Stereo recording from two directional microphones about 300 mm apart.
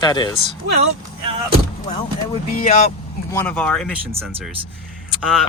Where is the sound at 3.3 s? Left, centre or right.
Centre.